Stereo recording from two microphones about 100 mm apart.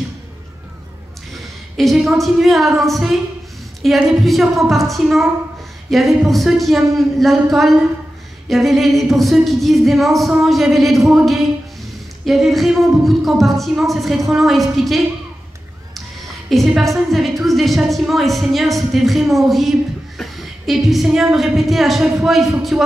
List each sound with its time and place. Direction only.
1.8 s a woman's voice: centre (ahead or behind)
16.4 s a woman's voice: centre (ahead or behind)